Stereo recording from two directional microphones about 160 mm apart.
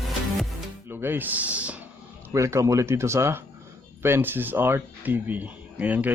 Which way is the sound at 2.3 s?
20° right (ahead or behind).